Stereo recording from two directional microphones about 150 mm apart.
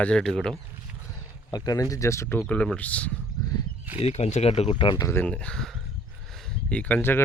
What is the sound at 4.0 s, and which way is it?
Speech, 50° left (ahead or behind).